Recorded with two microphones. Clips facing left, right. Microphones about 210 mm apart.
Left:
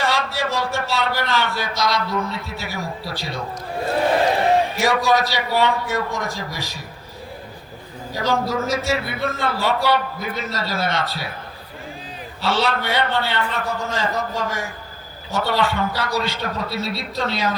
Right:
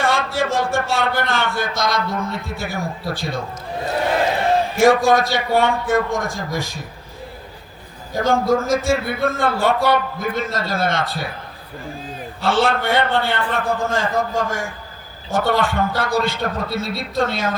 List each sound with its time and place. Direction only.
0.0 s a man's voice: 50° right (ahead or behind)
4.8 s a man's voice: 50° right (ahead or behind)
8.1 s a man's voice: 50° right (ahead or behind)
12.4 s a man's voice: 50° right (ahead or behind)